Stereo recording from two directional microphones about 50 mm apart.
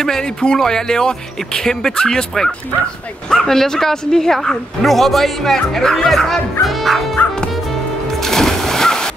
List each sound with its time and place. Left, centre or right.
0.0 s music: centre
0.6 s a woman's voice: centre
6.6 s music: centre
7.2 s music: left
8.2 s music: centre